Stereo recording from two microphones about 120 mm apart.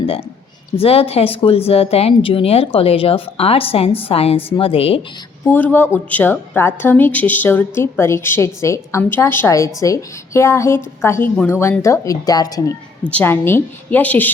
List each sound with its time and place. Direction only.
0.8 s speech: 55° left (ahead or behind)
5.4 s a woman's voice: 15° left (ahead or behind); by 12.7 s 30° left (ahead or behind)
13.1 s a woman's voice: 15° left (ahead or behind)